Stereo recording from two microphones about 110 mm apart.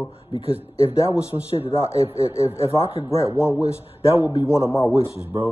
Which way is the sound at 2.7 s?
60° left (ahead or behind).